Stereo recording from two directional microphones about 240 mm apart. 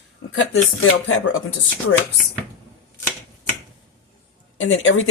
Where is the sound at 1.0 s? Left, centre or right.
Left.